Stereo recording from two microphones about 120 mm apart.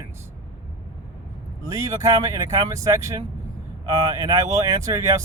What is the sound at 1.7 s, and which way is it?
Speech, 30° right (ahead or behind).